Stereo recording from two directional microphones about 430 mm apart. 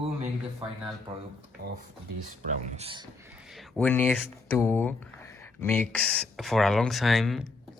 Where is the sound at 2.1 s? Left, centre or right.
Right.